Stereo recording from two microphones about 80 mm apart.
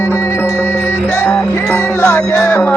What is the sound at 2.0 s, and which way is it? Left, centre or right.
Music, left.